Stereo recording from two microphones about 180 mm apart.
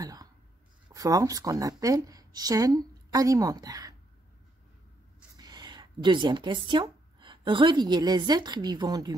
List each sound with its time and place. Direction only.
0.0 s a sound: 20° right (ahead or behind)
0.8 s speech: 20° right (ahead or behind)
5.4 s speech: 25° right (ahead or behind)